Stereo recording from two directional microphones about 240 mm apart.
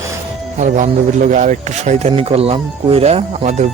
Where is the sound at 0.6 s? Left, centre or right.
Right.